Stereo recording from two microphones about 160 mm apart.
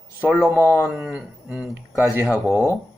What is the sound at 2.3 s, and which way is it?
Speech, 15° left (ahead or behind).